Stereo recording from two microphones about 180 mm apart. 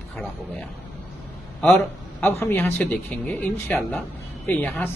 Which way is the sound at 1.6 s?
Centre (ahead or behind).